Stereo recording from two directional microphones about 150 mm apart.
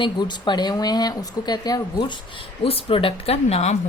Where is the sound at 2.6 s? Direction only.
40° left (ahead or behind).